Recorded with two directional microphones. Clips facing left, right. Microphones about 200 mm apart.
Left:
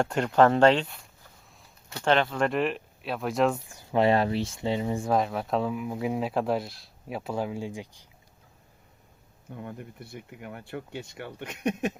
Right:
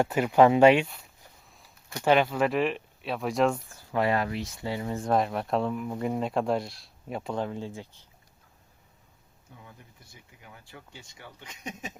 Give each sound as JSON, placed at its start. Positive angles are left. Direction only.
{"t": 0.0, "sound": "speech", "side_deg": -5}
{"t": 1.9, "sound": "speech", "side_deg": -10}
{"t": 3.7, "sound": "speech", "side_deg": 20}
{"t": 5.0, "sound": "speech", "side_deg": 0}
{"t": 9.5, "sound": "speech", "side_deg": 60}